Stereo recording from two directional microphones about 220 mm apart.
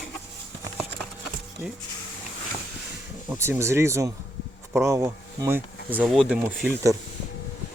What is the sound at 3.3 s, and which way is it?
Speech, 10° right (ahead or behind).